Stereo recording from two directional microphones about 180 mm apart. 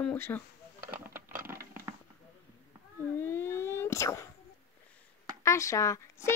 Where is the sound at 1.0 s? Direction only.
10° right (ahead or behind).